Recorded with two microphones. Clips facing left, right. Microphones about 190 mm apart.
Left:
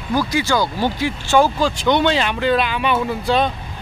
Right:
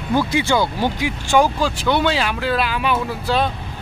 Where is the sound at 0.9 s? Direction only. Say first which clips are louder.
Left 1 dB; 15° right (ahead or behind).